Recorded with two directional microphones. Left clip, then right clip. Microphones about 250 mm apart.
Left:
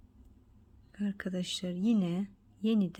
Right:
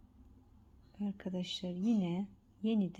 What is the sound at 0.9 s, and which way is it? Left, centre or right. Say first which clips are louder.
Speech: left 4 dB; centre.